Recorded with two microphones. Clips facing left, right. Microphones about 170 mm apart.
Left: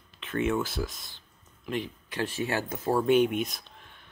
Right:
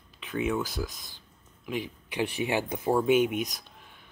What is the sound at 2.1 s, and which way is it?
Speech, 15° right (ahead or behind).